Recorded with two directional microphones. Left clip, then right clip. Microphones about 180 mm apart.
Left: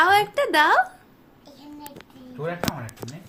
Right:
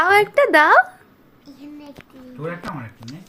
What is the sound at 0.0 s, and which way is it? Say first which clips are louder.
Speech: right 4 dB; 25° right (ahead or behind).